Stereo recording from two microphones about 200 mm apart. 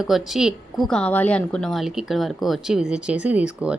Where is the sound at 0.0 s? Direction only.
Centre (ahead or behind).